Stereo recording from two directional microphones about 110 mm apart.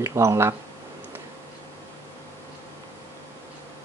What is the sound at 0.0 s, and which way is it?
Speech, 25° right (ahead or behind).